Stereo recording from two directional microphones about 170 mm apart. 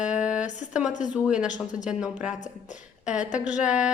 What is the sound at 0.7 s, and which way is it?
A woman's voice, 5° right (ahead or behind).